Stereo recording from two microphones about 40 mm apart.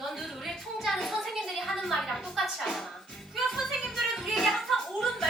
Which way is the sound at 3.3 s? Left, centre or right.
Centre.